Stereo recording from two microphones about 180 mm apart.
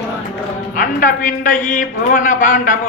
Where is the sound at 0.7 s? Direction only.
50° left (ahead or behind).